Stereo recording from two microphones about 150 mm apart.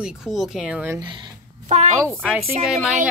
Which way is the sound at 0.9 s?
30° right (ahead or behind).